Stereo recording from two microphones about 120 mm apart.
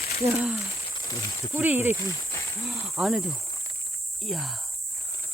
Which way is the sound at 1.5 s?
15° right (ahead or behind).